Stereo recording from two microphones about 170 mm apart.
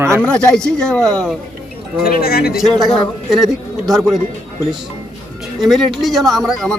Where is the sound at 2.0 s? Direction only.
65° left (ahead or behind).